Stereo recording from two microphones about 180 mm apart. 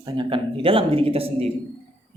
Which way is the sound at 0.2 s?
30° right (ahead or behind).